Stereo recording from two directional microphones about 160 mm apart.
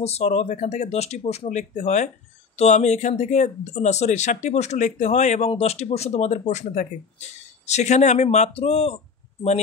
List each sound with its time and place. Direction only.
0.0 s speech: 40° left (ahead or behind)